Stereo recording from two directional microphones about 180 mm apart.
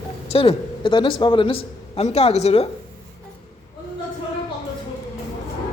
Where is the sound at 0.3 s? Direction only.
30° left (ahead or behind).